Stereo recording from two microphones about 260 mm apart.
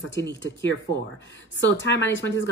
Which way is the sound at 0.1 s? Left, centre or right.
Left.